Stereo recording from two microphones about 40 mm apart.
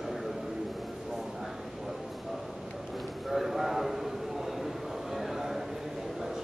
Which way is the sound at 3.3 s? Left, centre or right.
Centre.